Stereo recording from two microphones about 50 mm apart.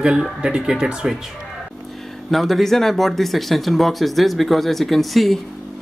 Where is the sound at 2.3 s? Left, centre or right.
Centre.